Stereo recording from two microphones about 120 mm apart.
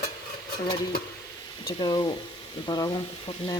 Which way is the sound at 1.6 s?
35° left (ahead or behind).